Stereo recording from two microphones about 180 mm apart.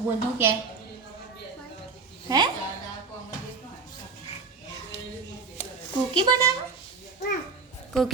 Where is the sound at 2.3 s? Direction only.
20° right (ahead or behind).